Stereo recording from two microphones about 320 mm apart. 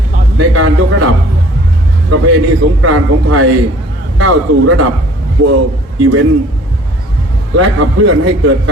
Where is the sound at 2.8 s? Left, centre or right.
Right.